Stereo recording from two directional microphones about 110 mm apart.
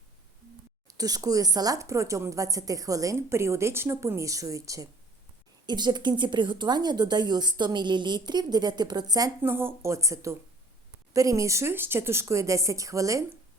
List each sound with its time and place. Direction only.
0.9 s speech: 35° right (ahead or behind)
5.6 s speech: 40° right (ahead or behind)
9.4 s speech: 20° right (ahead or behind)